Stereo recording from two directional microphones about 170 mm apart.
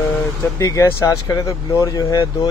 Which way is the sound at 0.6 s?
20° left (ahead or behind).